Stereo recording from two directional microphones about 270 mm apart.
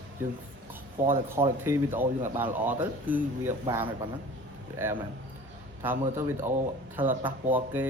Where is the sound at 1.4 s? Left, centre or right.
Right.